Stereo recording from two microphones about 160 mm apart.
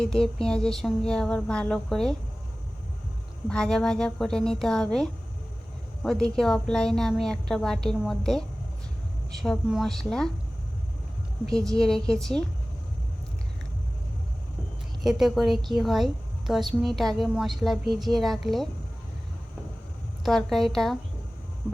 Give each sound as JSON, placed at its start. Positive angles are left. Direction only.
{"t": 0.0, "sound": "a woman's voice", "side_deg": 5}
{"t": 3.5, "sound": "a woman's voice", "side_deg": 5}
{"t": 11.4, "sound": "a woman's voice", "side_deg": 5}
{"t": 15.0, "sound": "a woman's voice", "side_deg": 0}
{"t": 20.2, "sound": "a woman's voice", "side_deg": 0}